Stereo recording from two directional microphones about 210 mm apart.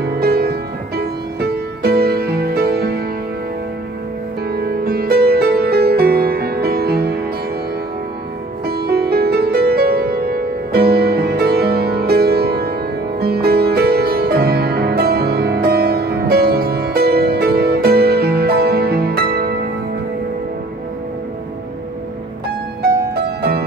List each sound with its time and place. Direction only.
0.0 s music: 50° right (ahead or behind)
4.5 s music: 50° right (ahead or behind)
8.6 s music: 50° right (ahead or behind)
22.8 s music: 50° right (ahead or behind)